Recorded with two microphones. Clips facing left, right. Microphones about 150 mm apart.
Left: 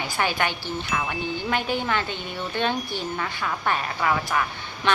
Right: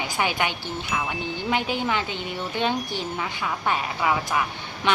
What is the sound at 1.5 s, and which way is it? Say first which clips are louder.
A woman's voice: right 1 dB; 15° right (ahead or behind).